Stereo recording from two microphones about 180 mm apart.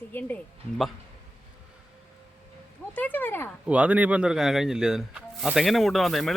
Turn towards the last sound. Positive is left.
turn(degrees=0)  # may be behind; listen again after turning